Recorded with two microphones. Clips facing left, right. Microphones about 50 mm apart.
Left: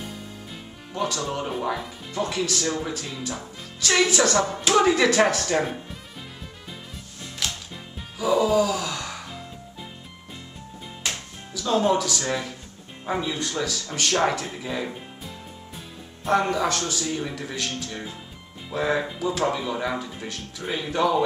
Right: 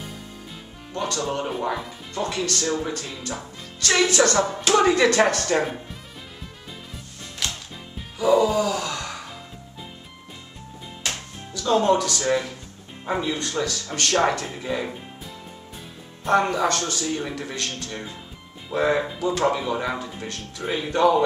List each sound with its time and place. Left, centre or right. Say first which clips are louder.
0.9 s a man's voice: right 1 dB; centre
7.4 s music: even; centre
8.2 s gasp: right 1 dB; centre
11.1 s music: right 1 dB; centre
12.2 s speech: right 5 dB; centre
16.3 s a man's voice: right 2 dB; centre
17.2 s speech: right 1 dB; centre
20.6 s speech: right 4 dB; centre